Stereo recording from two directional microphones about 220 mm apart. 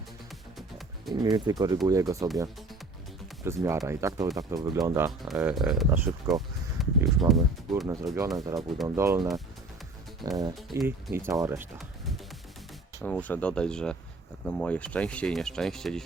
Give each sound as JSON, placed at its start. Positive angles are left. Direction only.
{"t": 1.1, "sound": "speech", "side_deg": -20}
{"t": 3.4, "sound": "speech", "side_deg": -10}
{"t": 5.2, "sound": "speech", "side_deg": -5}
{"t": 6.7, "sound": "a sound", "side_deg": 0}
{"t": 7.7, "sound": "speech", "side_deg": 0}
{"t": 8.5, "sound": "speech", "side_deg": -15}